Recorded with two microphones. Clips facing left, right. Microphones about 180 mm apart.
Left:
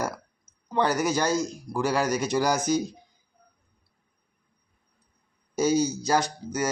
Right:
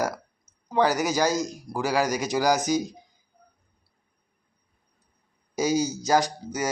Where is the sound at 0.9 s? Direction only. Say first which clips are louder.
Right 1 dB; 40° right (ahead or behind).